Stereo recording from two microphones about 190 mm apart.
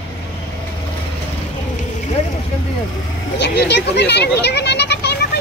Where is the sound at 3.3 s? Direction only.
65° left (ahead or behind).